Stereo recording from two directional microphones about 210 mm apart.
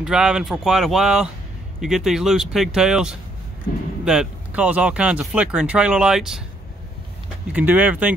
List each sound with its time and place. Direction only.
0.0 s speech: 5° right (ahead or behind)
7.5 s speech: 10° right (ahead or behind)